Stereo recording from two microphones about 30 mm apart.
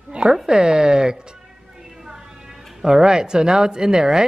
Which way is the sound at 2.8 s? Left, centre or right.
Centre.